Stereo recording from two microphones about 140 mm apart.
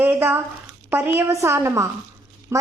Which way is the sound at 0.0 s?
15° right (ahead or behind).